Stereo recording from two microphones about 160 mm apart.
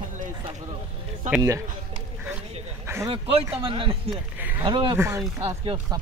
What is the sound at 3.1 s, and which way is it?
Speech, 35° right (ahead or behind).